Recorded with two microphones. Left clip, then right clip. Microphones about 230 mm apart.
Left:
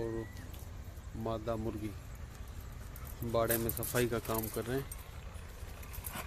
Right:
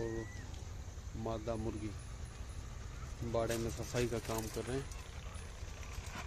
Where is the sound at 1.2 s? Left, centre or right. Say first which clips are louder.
Left 3 dB; centre.